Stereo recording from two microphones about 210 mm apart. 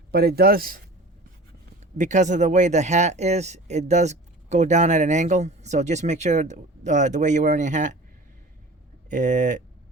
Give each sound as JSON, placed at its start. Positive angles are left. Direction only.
{"t": 0.1, "sound": "speech", "side_deg": -50}
{"t": 2.0, "sound": "speech", "side_deg": -35}
{"t": 9.0, "sound": "speech", "side_deg": -35}